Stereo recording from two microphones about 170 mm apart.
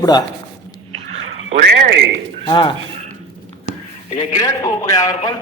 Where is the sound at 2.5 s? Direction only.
30° left (ahead or behind).